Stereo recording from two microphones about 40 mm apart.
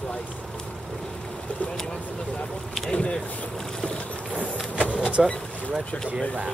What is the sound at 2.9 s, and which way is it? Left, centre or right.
Boat, left.